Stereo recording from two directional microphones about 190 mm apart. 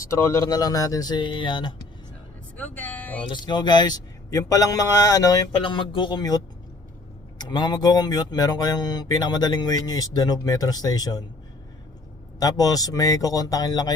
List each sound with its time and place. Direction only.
0.1 s speech: 15° left (ahead or behind)
2.6 s speech: 10° left (ahead or behind)
3.2 s speech: 25° left (ahead or behind)
12.4 s speech: 20° left (ahead or behind)